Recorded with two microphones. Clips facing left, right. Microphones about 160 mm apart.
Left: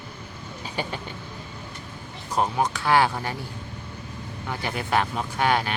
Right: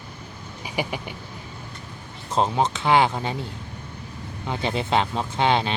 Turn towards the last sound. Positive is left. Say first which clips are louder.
# right 2 dB
turn(degrees=-25)  # may be behind; listen again after turning